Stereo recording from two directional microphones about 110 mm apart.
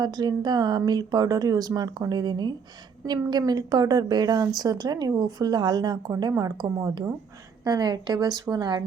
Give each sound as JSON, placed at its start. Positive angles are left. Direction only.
{"t": 0.0, "sound": "a woman's voice", "side_deg": -40}